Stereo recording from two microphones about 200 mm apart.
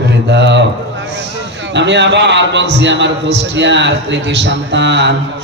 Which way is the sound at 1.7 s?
60° right (ahead or behind).